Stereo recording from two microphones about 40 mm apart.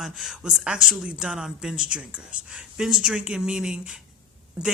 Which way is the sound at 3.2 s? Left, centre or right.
Right.